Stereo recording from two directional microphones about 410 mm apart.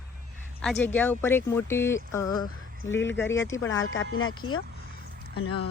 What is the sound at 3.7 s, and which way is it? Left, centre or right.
Speech, left.